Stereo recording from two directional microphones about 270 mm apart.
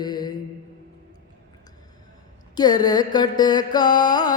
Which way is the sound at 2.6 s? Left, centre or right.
Centre.